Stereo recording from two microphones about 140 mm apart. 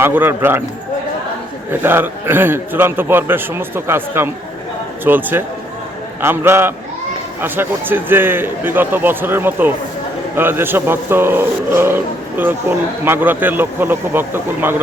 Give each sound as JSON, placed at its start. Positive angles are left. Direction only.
{"t": 0.0, "sound": "a man's voice", "side_deg": -15}
{"t": 1.8, "sound": "a man's voice", "side_deg": -15}